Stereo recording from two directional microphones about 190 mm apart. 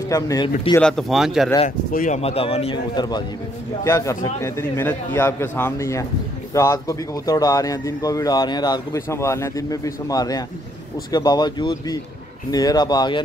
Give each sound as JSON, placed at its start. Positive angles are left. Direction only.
{"t": 0.1, "sound": "speech", "side_deg": 20}
{"t": 0.7, "sound": "speech", "side_deg": 5}
{"t": 1.9, "sound": "a man's voice", "side_deg": 45}